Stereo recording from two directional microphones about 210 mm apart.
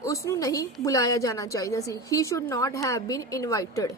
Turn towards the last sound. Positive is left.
turn(degrees=15)  # may be behind; listen again after turning